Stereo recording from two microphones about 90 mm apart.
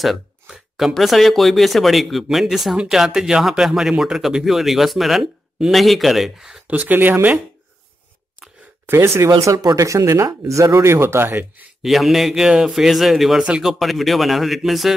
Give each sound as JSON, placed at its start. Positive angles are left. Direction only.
{"t": 0.0, "sound": "speech", "side_deg": 0}
{"t": 6.7, "sound": "speech", "side_deg": -20}
{"t": 8.8, "sound": "speech", "side_deg": -30}
{"t": 11.8, "sound": "speech", "side_deg": 0}